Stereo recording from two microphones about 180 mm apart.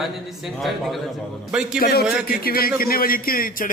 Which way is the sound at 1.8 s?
55° left (ahead or behind).